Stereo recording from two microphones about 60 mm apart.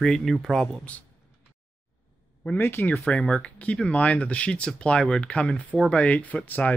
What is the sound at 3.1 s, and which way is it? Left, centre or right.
Speech, centre.